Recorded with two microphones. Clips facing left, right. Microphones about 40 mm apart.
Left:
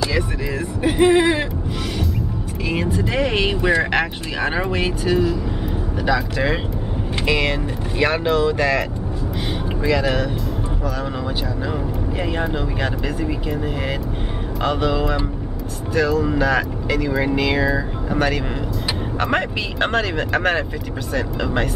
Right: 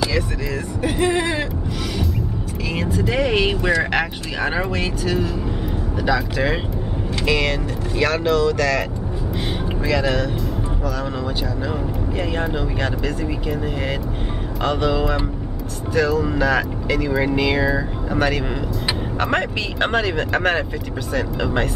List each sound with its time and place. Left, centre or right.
0.8 s speech: centre
2.7 s speech: centre
9.8 s speech: centre
12.2 s speech: centre